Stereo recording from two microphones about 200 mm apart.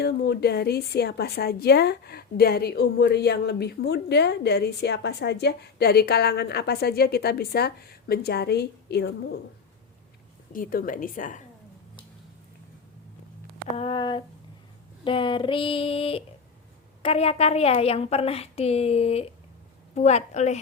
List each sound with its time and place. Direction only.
0.0 s a woman's voice: 55° left (ahead or behind)
10.5 s a woman's voice: 45° left (ahead or behind)
13.7 s female singing: 25° left (ahead or behind)
17.0 s a woman's voice: 30° left (ahead or behind)